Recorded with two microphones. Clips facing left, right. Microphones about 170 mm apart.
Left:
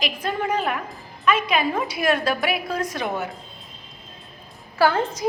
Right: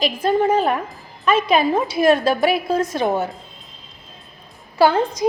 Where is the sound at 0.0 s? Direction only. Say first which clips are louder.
Right 8 dB; 30° right (ahead or behind).